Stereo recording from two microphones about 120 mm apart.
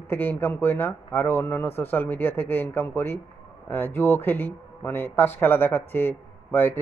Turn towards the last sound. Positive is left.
turn(degrees=15)  # may be behind; listen again after turning